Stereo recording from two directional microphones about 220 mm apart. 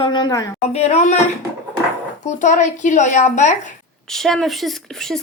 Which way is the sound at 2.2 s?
35° left (ahead or behind).